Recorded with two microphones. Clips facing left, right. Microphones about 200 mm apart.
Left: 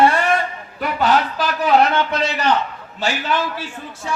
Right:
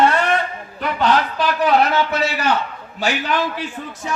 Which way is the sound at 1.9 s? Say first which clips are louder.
Right 1 dB; 5° right (ahead or behind).